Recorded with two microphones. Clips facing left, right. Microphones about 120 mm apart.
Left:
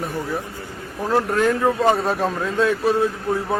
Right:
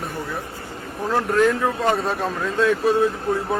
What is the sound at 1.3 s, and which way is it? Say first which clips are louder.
Speech: right 3 dB; centre (ahead or behind).